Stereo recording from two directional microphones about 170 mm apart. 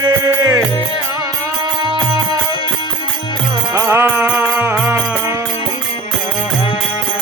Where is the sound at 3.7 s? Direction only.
15° right (ahead or behind).